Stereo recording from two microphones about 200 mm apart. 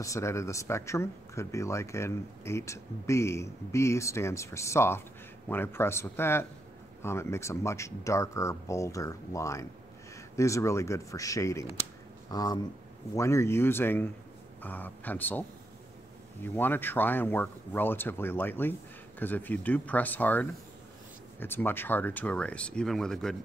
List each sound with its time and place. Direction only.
0.0 s speech: 15° left (ahead or behind)
16.4 s speech: 10° left (ahead or behind)